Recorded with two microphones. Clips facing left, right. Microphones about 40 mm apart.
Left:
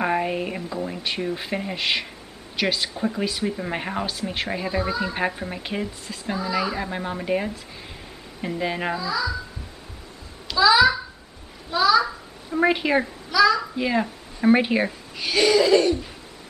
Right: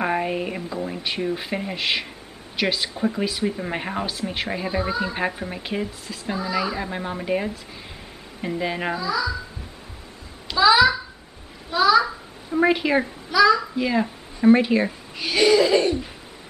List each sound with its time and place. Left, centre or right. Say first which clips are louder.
0.0 s a woman's voice: even; centre
10.5 s a child's voice: right 1 dB; centre
11.7 s a child's voice: right 1 dB; centre
13.3 s a child's voice: right 2 dB; centre
13.6 s a sound: right 1 dB; centre
14.4 s speech: right 2 dB; centre
14.9 s speech: right 1 dB; centre
15.8 s a sound: left 1 dB; centre